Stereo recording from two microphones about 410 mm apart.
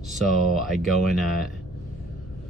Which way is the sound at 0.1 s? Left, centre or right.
Centre.